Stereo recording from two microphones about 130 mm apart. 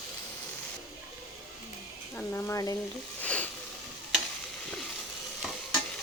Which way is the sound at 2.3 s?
15° left (ahead or behind).